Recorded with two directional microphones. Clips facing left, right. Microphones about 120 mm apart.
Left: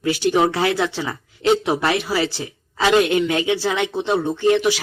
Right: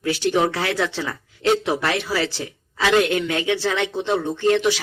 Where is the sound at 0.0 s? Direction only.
15° left (ahead or behind).